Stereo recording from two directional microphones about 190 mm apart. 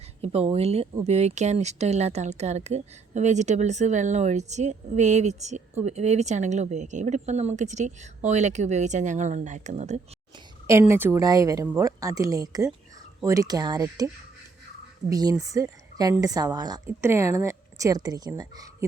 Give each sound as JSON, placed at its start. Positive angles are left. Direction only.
{"t": 0.2, "sound": "speech", "side_deg": -30}
{"t": 10.7, "sound": "speech", "side_deg": -15}
{"t": 15.1, "sound": "speech", "side_deg": -20}